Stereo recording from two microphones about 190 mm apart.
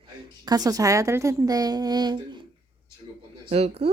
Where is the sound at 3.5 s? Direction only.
30° right (ahead or behind).